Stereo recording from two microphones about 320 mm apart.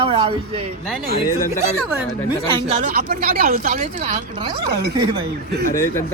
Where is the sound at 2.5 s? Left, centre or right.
Right.